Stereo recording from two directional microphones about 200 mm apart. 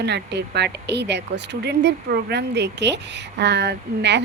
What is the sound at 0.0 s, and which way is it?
Speech, 60° right (ahead or behind).